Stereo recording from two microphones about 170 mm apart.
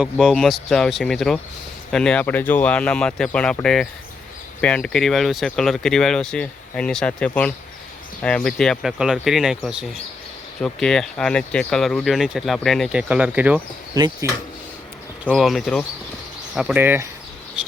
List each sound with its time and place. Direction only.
0.0 s speech: 5° right (ahead or behind)
13.9 s speech: 20° right (ahead or behind)
15.3 s speech: centre (ahead or behind)